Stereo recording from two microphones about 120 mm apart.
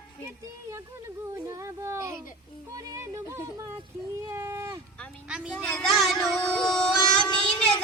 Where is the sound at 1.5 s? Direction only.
25° right (ahead or behind).